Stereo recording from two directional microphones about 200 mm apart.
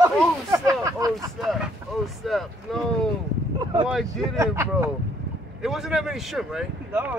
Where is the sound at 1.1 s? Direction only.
Centre (ahead or behind).